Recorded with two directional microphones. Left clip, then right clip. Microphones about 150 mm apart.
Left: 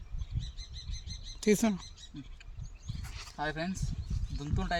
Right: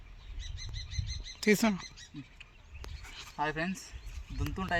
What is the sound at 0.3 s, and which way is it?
Bird flight, 5° right (ahead or behind).